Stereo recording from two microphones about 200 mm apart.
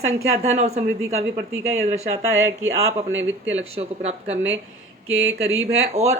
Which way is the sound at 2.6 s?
75° right (ahead or behind).